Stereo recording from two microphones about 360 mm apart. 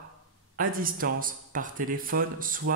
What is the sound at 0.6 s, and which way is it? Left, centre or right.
Speech, right.